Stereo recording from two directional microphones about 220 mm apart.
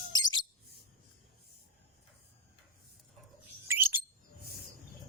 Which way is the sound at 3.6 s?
10° right (ahead or behind).